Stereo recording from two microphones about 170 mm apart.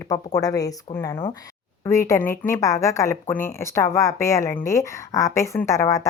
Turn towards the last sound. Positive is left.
turn(degrees=20)  # may be behind; listen again after turning